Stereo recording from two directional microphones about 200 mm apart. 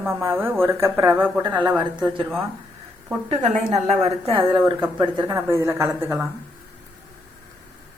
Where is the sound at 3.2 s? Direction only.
35° right (ahead or behind).